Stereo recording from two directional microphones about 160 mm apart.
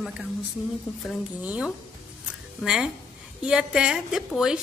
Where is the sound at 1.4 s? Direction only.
10° right (ahead or behind).